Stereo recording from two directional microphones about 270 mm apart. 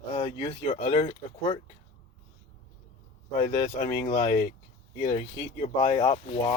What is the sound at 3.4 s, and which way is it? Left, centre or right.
Speech, centre.